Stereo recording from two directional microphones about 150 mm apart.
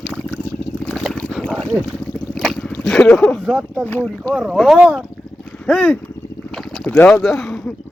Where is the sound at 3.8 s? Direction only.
10° left (ahead or behind).